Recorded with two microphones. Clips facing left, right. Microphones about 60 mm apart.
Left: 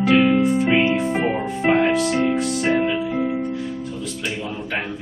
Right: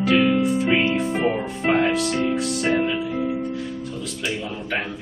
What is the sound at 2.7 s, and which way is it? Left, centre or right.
Music, centre.